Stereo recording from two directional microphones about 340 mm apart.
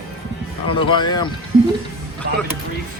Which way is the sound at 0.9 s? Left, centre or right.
Centre.